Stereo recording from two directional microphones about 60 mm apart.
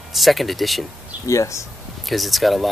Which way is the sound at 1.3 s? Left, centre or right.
Left.